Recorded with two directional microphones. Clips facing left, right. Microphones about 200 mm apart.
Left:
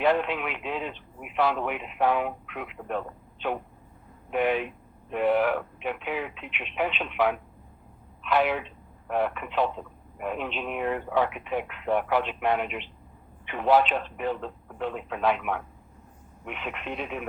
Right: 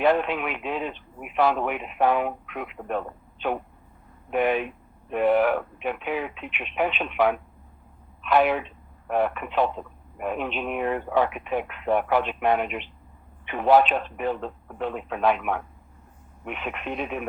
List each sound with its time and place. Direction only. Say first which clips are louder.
0.0 s speech: right 2 dB; 50° right (ahead or behind)
4.3 s speech: right 2 dB; 50° right (ahead or behind)